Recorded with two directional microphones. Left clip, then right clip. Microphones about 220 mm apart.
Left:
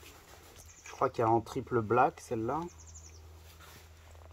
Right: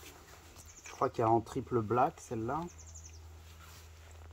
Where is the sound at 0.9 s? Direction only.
5° left (ahead or behind).